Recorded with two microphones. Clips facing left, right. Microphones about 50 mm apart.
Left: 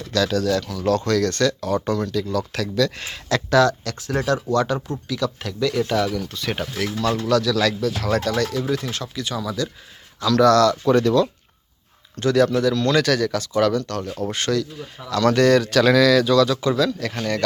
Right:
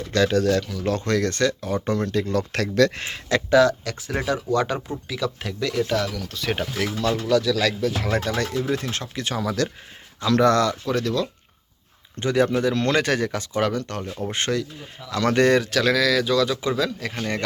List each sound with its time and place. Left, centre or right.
0.1 s speech: right
0.7 s speech: centre
0.9 s speech: right
3.0 s speech: right
3.3 s speech: centre
8.7 s speech: right
10.2 s speech: right
10.8 s speech: centre
12.1 s speech: right
15.7 s speech: centre